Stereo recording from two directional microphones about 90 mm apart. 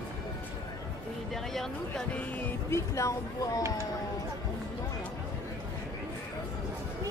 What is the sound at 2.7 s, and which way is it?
Speech, 35° left (ahead or behind).